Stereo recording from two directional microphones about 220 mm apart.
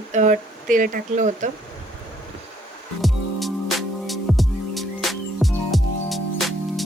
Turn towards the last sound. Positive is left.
turn(degrees=0)  # may be behind; listen again after turning